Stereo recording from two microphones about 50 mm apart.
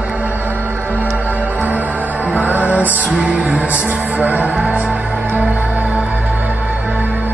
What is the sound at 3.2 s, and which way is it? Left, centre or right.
Music, centre.